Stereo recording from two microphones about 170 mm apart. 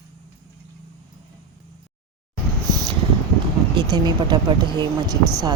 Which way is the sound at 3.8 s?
25° right (ahead or behind).